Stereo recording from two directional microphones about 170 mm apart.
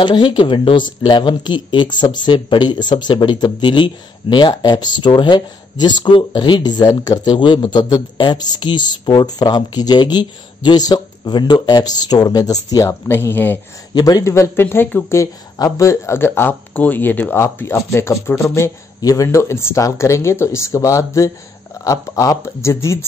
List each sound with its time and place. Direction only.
0.0 s speech: 25° left (ahead or behind); by 13.6 s 10° left (ahead or behind)
13.9 s speech: 20° left (ahead or behind)